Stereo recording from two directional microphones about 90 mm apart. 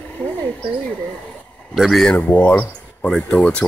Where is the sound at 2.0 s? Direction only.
15° left (ahead or behind).